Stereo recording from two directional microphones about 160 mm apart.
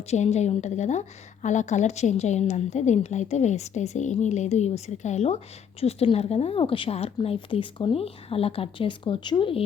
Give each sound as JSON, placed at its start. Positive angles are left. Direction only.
{"t": 0.1, "sound": "a woman's voice", "side_deg": 45}